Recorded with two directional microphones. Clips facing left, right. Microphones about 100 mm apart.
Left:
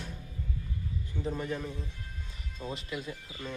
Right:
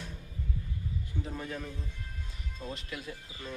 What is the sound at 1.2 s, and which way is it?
Speech, 5° left (ahead or behind).